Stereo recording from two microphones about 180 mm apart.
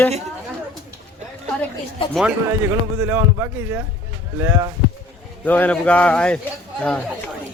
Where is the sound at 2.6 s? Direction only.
15° right (ahead or behind).